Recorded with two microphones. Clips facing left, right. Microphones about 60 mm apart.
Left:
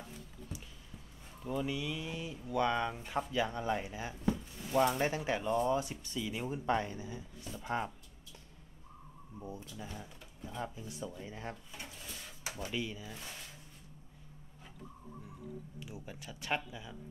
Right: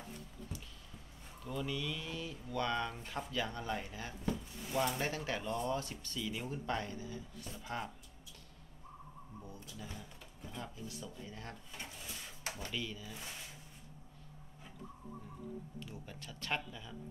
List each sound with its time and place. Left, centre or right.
1.4 s speech: centre
9.4 s speech: left
12.6 s speech: centre
15.8 s speech: centre